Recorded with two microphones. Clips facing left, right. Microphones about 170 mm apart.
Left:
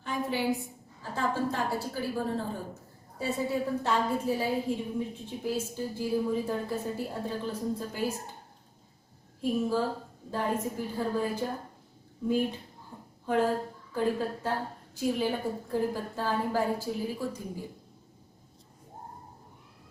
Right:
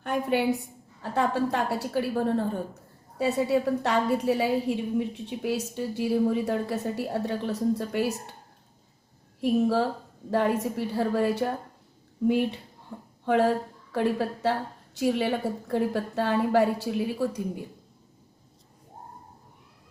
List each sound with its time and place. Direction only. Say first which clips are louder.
0.0 s a woman's voice: right 5 dB; 60° right (ahead or behind)
9.4 s a woman's voice: right 5 dB; 70° right (ahead or behind)
12.9 s a sound: right 7 dB; 65° right (ahead or behind)
13.2 s a woman's voice: right 4 dB; 75° right (ahead or behind)